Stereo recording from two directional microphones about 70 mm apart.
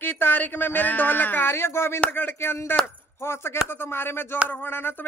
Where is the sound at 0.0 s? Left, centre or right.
Left.